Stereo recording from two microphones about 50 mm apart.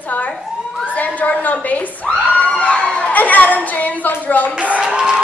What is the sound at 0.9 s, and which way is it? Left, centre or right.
A woman's voice, left.